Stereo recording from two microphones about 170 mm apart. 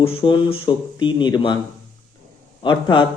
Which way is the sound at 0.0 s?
30° left (ahead or behind).